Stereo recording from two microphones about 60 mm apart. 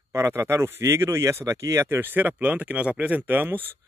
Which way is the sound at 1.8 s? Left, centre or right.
Right.